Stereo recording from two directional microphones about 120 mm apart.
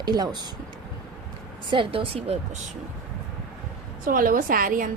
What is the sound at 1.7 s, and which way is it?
Speech, 45° right (ahead or behind).